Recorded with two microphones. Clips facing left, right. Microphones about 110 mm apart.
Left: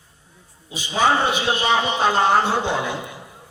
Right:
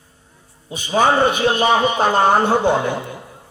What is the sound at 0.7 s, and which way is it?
A man's voice, 50° right (ahead or behind).